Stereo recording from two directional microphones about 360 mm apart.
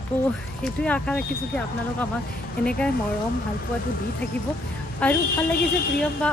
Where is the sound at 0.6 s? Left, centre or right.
Centre.